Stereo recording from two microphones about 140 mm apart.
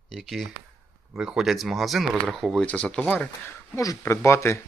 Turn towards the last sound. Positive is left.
turn(degrees=20)  # may be behind; listen again after turning